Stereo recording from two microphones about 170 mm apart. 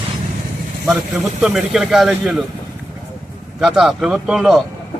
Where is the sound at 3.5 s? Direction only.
Centre (ahead or behind).